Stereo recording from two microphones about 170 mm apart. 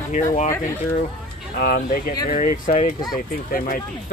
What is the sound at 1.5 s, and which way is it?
Speech, 65° left (ahead or behind).